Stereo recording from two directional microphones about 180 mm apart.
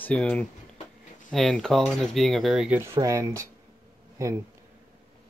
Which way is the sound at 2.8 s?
15° right (ahead or behind).